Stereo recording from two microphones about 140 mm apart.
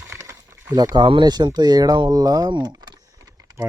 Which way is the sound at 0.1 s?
20° right (ahead or behind).